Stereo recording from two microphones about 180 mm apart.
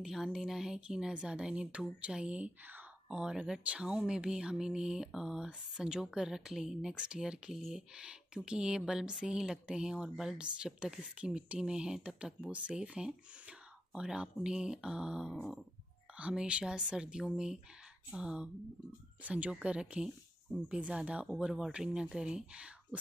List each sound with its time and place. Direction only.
0.0 s speech: centre (ahead or behind)